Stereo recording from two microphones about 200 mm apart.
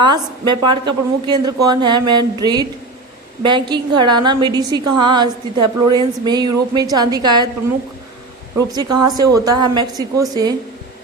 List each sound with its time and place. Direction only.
0.0 s a woman's voice: 20° right (ahead or behind)
8.5 s a woman's voice: 20° right (ahead or behind)